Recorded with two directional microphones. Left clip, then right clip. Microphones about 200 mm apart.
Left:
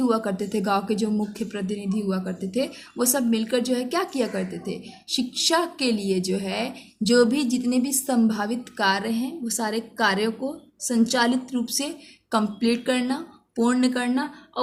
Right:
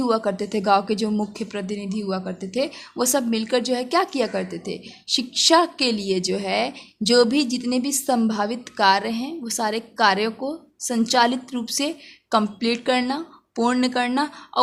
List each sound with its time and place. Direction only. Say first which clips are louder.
0.0 s speech: right 2 dB; 35° right (ahead or behind)